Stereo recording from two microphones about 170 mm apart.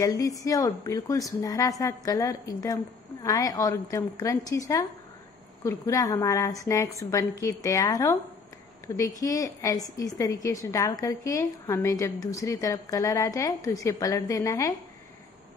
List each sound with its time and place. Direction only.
0.0 s a woman's voice: 20° left (ahead or behind)